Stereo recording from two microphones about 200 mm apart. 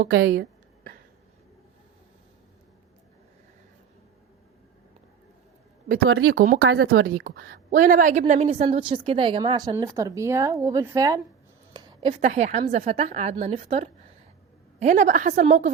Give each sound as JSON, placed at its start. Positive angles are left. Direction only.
{"t": 0.2, "sound": "a woman's voice", "side_deg": -50}
{"t": 6.1, "sound": "speech", "side_deg": -90}
{"t": 7.0, "sound": "a woman's voice", "side_deg": -50}
{"t": 11.7, "sound": "a sound", "side_deg": -20}
{"t": 12.2, "sound": "a woman's voice", "side_deg": -35}